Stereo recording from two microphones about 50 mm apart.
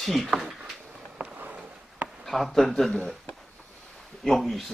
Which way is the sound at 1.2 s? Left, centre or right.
Right.